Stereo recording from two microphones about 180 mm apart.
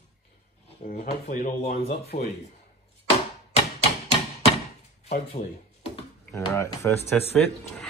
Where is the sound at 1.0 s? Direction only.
45° left (ahead or behind).